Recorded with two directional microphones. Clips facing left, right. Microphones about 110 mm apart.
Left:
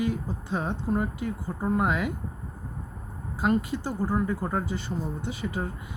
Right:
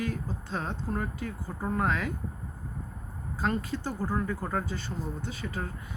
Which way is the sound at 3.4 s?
15° left (ahead or behind).